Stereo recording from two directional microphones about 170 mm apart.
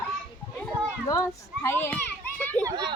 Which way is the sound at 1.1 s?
15° left (ahead or behind).